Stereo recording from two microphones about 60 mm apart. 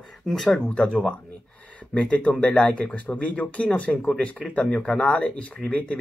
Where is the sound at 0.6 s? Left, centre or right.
Left.